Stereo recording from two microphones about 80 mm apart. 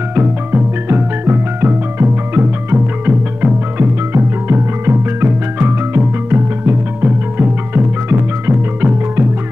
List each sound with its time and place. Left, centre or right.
0.1 s music: right
3.7 s music: right